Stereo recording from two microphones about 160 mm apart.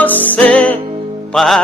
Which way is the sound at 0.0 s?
10° left (ahead or behind).